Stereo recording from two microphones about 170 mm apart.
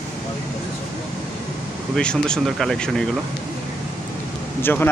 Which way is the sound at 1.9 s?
5° left (ahead or behind).